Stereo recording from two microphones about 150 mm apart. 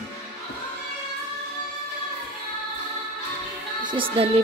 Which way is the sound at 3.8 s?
35° right (ahead or behind).